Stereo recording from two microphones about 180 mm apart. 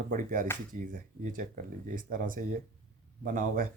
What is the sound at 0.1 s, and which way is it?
Speech, 50° right (ahead or behind).